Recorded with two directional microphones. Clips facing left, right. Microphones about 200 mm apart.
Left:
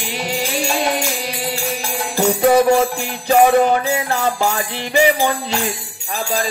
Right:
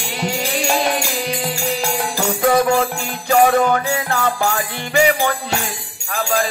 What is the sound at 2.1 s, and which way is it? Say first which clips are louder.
Music: left 4 dB; 20° left (ahead or behind).